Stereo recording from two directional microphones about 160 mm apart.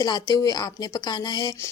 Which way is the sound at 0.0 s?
25° left (ahead or behind).